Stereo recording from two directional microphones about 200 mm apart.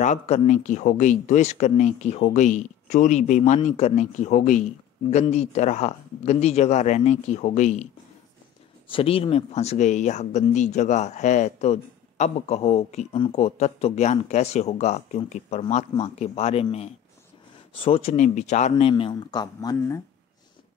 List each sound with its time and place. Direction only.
0.0 s speech: 35° left (ahead or behind); by 20.0 s 15° left (ahead or behind)